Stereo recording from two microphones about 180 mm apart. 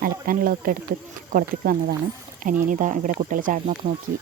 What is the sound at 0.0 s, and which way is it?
Speech, 55° right (ahead or behind).